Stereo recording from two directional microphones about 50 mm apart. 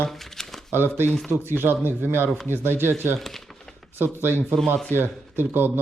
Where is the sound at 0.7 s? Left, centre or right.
Right.